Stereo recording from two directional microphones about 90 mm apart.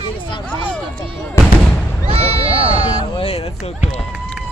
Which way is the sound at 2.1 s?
90° right.